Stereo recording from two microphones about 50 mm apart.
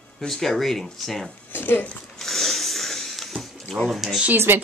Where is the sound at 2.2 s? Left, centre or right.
Centre.